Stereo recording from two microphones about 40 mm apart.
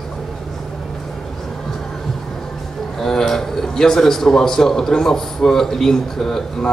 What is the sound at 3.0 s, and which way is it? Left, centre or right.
A man's voice, centre.